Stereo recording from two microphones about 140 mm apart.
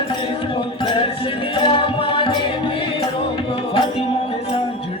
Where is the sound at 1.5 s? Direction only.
40° left (ahead or behind).